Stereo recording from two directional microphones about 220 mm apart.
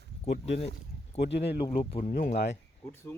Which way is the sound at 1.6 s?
25° left (ahead or behind).